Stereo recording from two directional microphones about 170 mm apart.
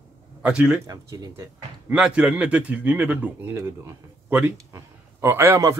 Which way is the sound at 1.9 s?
5° right (ahead or behind).